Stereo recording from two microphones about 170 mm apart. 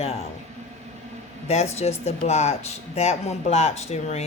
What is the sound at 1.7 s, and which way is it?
Speech, 40° left (ahead or behind).